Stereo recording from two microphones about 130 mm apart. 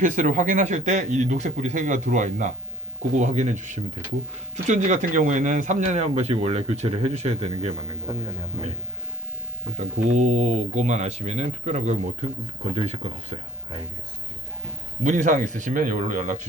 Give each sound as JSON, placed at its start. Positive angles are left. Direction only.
{"t": 0.0, "sound": "speech", "side_deg": -80}
{"t": 8.1, "sound": "a man's voice", "side_deg": -30}
{"t": 9.7, "sound": "speech", "side_deg": -65}
{"t": 15.0, "sound": "speech", "side_deg": -75}